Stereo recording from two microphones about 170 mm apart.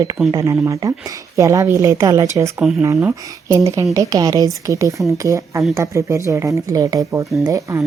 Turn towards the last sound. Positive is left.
turn(degrees=-20)  # may be behind; listen again after turning